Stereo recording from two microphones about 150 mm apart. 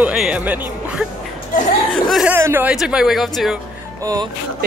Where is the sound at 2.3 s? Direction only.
15° right (ahead or behind).